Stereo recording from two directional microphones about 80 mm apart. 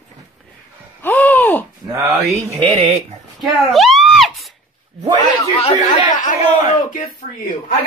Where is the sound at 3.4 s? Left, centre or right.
Centre.